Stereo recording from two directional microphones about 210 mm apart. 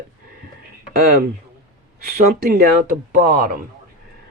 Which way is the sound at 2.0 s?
45° right (ahead or behind).